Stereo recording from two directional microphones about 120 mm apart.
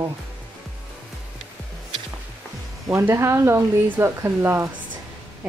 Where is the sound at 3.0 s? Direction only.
20° right (ahead or behind).